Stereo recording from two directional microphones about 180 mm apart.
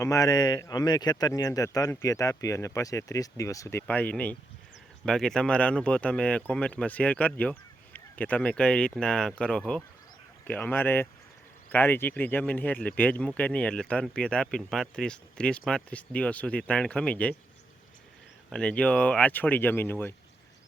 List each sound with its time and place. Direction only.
0.0 s speech: 20° left (ahead or behind)
18.5 s speech: 5° left (ahead or behind)